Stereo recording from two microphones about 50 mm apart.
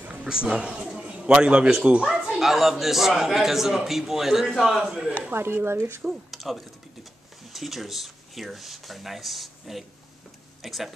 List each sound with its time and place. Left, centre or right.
0.1 s speech: centre
0.8 s a sound: centre
2.3 s a man's voice: centre
5.3 s speech: right
6.3 s a sound: centre
7.5 s speech: centre